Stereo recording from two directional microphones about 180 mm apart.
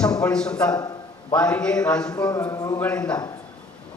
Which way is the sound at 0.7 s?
20° left (ahead or behind).